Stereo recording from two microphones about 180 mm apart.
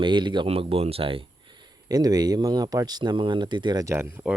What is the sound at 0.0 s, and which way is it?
Speech, 25° right (ahead or behind).